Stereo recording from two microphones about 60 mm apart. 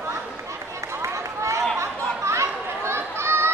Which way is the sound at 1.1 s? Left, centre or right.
Right.